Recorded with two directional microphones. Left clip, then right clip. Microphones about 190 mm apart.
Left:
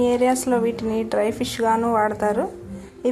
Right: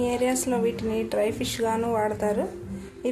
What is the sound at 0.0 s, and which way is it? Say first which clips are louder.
A woman's voice: left 6 dB; 20° left (ahead or behind).